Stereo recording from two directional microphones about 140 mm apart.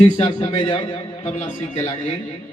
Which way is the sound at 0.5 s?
35° left (ahead or behind).